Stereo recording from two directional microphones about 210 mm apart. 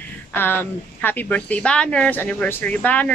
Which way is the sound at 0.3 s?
10° left (ahead or behind).